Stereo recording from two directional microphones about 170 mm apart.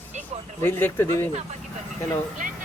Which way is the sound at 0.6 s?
15° left (ahead or behind).